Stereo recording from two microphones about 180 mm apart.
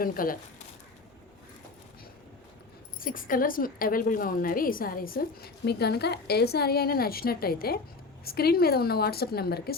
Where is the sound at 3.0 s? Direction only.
50° left (ahead or behind).